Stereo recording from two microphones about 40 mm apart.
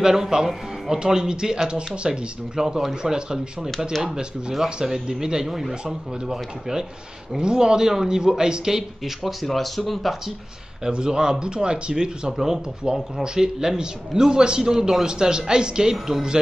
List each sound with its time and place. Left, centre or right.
0.0 s a man's voice: centre
9.2 s speech: centre
10.9 s speech: right
12.4 s a man's voice: centre